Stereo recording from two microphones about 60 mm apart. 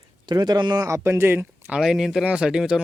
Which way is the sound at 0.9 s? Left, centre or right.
Right.